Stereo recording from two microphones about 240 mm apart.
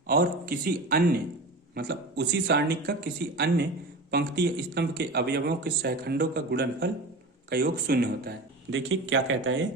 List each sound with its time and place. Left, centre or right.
0.1 s a man's voice: right
8.7 s speech: right